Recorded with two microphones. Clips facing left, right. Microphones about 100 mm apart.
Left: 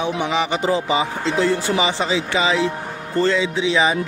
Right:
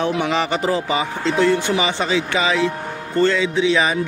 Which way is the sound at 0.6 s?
25° left (ahead or behind).